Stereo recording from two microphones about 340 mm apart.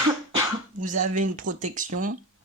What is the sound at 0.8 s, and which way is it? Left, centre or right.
Speech, right.